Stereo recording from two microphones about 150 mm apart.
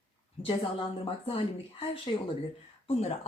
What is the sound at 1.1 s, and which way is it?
Speech, 40° left (ahead or behind).